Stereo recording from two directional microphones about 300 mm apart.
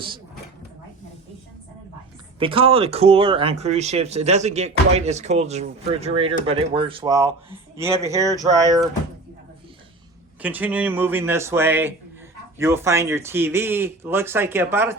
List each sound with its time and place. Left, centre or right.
2.4 s speech: centre
10.4 s speech: centre